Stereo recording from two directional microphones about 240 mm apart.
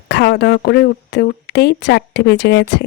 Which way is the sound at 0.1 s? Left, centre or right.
Left.